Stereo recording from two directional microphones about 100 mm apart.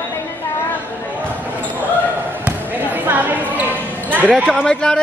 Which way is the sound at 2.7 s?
15° right (ahead or behind).